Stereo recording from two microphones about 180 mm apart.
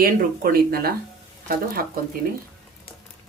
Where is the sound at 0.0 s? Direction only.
55° right (ahead or behind).